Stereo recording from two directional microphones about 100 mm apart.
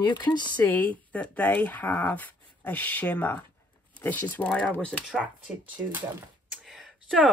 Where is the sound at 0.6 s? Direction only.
15° left (ahead or behind).